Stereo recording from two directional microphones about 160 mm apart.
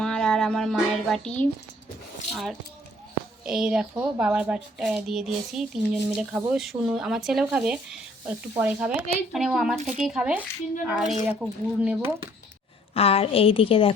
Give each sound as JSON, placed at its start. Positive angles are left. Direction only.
{"t": 0.0, "sound": "a woman's voice", "side_deg": 5}
{"t": 12.9, "sound": "a woman's voice", "side_deg": 35}